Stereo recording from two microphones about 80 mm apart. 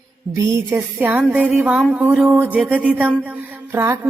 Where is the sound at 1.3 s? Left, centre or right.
Centre.